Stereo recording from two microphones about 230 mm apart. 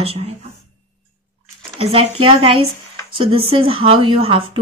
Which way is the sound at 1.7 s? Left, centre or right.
Right.